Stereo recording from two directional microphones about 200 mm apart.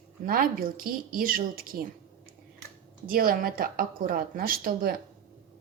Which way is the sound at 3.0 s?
45° right (ahead or behind).